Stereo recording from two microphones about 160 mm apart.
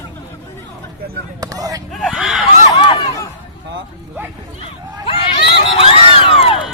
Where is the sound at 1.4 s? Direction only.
20° right (ahead or behind).